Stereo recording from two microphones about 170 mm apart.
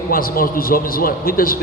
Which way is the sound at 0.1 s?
60° left (ahead or behind).